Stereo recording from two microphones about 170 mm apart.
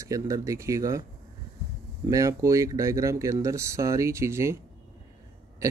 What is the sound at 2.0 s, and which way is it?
Speech, 20° right (ahead or behind).